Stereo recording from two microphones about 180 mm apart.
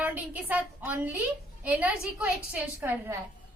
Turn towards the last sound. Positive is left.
turn(degrees=-10)  # may be behind; listen again after turning